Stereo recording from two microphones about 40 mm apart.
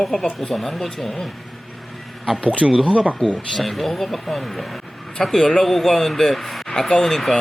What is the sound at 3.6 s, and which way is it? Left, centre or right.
Speech, centre.